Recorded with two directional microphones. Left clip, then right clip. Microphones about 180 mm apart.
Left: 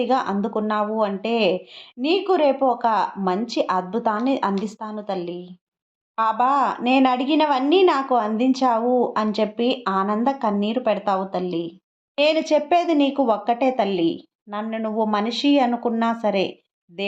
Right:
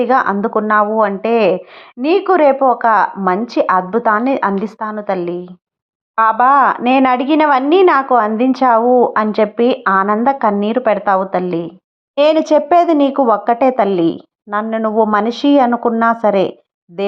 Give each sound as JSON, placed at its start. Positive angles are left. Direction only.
{"t": 0.0, "sound": "a woman's voice", "side_deg": -20}